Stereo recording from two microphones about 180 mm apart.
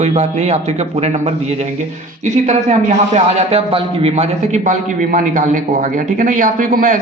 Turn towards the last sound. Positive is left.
turn(degrees=-50)  # may be behind; listen again after turning